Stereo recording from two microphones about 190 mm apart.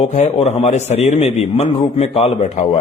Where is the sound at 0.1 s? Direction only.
35° left (ahead or behind).